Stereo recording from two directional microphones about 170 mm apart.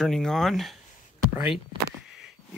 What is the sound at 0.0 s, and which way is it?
Speech, 5° left (ahead or behind).